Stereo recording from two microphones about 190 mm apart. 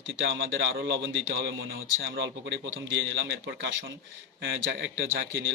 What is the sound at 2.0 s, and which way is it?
A man's voice, 70° right (ahead or behind).